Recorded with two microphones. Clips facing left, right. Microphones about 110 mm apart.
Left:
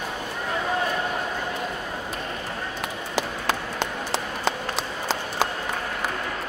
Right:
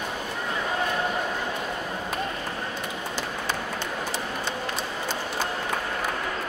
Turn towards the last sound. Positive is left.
turn(degrees=90)